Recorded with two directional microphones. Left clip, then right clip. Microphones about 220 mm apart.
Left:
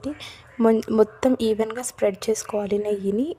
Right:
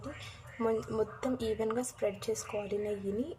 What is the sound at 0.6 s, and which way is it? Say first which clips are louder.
A woman's voice: left 13 dB; 45° left (ahead or behind).